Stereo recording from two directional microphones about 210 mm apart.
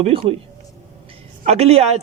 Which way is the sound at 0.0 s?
25° right (ahead or behind).